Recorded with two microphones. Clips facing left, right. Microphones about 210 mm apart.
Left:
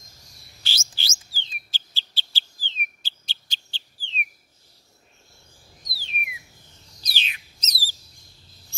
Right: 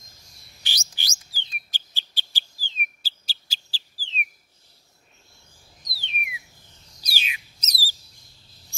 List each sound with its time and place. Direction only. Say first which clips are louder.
0.7 s chirp: left 1 dB; 15° right (ahead or behind)
1.7 s bird: left 1 dB; 15° right (ahead or behind)
3.3 s whistle: left 1 dB; 5° right (ahead or behind)
5.9 s a sound: even; centre (ahead or behind)
7.0 s bird: right 1 dB; 10° right (ahead or behind)